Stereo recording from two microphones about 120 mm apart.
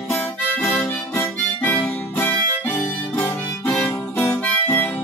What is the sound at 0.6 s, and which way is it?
Harmonica, 5° left (ahead or behind).